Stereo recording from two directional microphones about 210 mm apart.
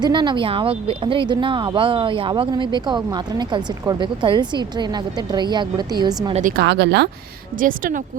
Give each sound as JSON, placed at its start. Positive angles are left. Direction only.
{"t": 0.0, "sound": "speech", "side_deg": -20}
{"t": 6.6, "sound": "speech", "side_deg": -55}
{"t": 7.6, "sound": "speech", "side_deg": -40}